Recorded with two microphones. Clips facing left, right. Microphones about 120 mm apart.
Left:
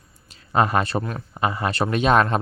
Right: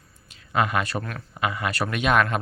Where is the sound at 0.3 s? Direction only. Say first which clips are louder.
Left 4 dB; 35° left (ahead or behind).